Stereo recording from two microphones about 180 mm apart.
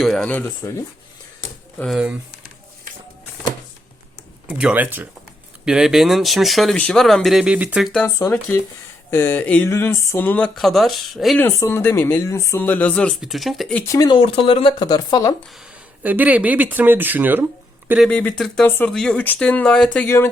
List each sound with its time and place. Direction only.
0.0 s speech: centre (ahead or behind)
1.8 s speech: 5° right (ahead or behind)
4.4 s speech: 5° right (ahead or behind)
7.9 s speech: 10° left (ahead or behind)
11.4 s speech: 15° left (ahead or behind)
13.8 s speech: 20° left (ahead or behind)
16.0 s speech: 10° right (ahead or behind)
18.1 s speech: 5° left (ahead or behind)